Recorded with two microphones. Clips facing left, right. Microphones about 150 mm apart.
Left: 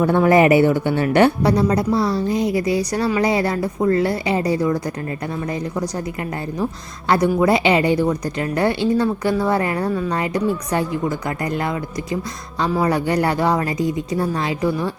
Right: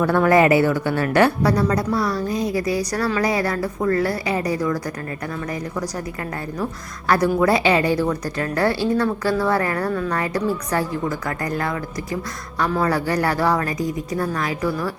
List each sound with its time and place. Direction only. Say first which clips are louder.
0.0 s speech: left 2 dB; 20° left (ahead or behind)
7.1 s speech: left 1 dB; 25° left (ahead or behind)